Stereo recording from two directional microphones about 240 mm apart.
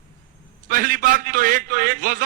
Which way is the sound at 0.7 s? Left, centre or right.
Right.